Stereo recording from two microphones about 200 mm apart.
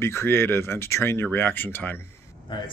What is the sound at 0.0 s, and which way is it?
Speech, 10° left (ahead or behind).